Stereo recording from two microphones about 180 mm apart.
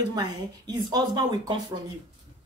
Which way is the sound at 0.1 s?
20° right (ahead or behind).